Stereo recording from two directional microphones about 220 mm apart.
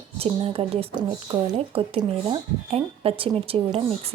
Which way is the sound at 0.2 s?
25° right (ahead or behind).